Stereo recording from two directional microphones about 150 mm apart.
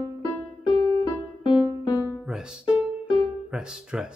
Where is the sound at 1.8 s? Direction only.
25° left (ahead or behind).